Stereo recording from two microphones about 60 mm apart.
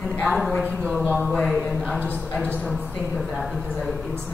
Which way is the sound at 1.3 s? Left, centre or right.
Centre.